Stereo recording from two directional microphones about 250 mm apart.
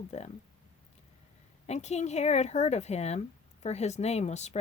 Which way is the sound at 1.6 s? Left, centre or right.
Left.